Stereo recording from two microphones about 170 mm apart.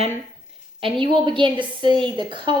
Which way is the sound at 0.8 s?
30° right (ahead or behind).